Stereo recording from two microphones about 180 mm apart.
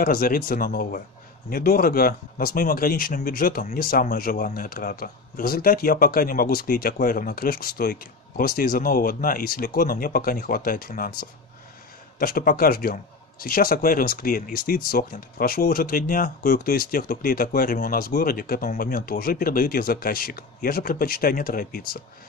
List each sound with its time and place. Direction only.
0.0 s speech: 55° left (ahead or behind)